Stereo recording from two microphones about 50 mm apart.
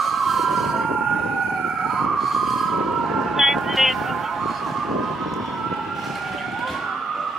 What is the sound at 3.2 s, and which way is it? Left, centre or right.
Vehicle, centre.